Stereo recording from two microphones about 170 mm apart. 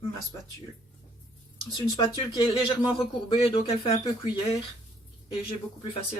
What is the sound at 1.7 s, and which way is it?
Speech, 25° left (ahead or behind).